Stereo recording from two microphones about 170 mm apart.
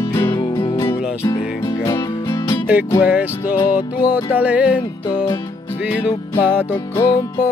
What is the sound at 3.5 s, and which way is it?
Music, 25° left (ahead or behind).